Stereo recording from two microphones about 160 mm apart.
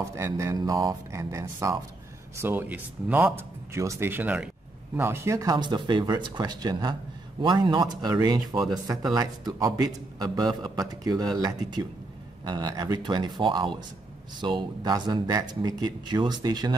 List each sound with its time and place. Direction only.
0.1 s a man's voice: 20° right (ahead or behind)